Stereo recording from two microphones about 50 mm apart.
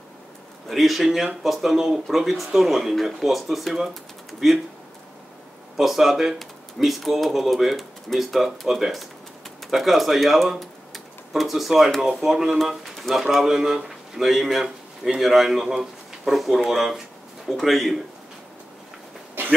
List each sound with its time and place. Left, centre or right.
0.7 s speech: centre
5.8 s speech: centre
19.4 s vehicle: right